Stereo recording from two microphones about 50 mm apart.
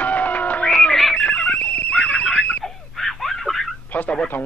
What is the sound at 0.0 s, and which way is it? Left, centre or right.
Music, left.